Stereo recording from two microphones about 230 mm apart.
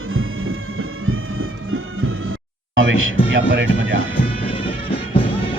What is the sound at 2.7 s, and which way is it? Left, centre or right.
Speech, right.